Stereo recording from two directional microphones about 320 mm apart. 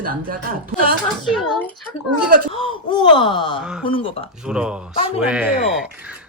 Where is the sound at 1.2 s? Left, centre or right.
Centre.